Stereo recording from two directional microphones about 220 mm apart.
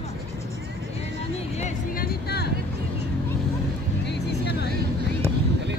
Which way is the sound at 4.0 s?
50° left (ahead or behind).